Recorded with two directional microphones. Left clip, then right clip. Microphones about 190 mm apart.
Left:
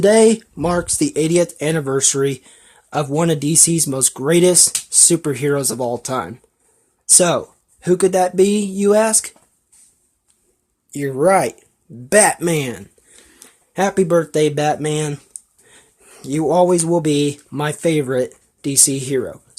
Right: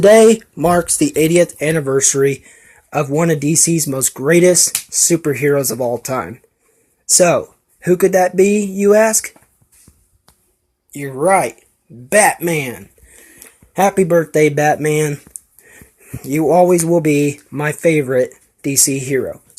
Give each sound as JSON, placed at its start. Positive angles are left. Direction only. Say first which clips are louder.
{"t": 0.7, "sound": "speech", "louder": "right 4 dB", "side_deg": 5}
{"t": 10.9, "sound": "speech", "louder": "right 1 dB", "side_deg": 45}
{"t": 13.1, "sound": "a sound", "louder": "right 4 dB", "side_deg": 10}
{"t": 13.7, "sound": "speech", "louder": "right 3 dB", "side_deg": 5}